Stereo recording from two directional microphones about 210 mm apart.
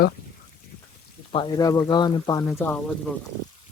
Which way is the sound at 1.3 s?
20° left (ahead or behind).